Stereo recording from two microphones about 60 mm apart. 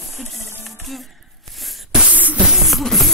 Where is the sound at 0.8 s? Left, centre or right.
Centre.